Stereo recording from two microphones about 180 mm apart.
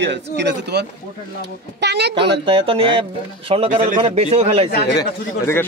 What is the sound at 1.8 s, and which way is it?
Speech, 70° right (ahead or behind).